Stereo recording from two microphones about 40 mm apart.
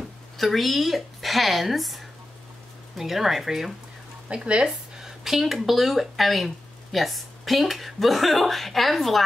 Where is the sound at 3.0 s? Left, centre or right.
Centre.